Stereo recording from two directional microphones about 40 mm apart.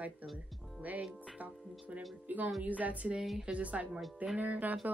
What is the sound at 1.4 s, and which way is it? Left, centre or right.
Speech, right.